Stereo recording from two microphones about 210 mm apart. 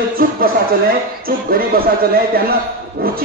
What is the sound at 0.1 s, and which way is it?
A man's voice, 45° right (ahead or behind).